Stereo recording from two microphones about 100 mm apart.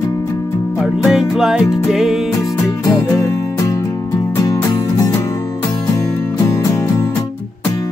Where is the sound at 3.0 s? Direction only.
30° left (ahead or behind).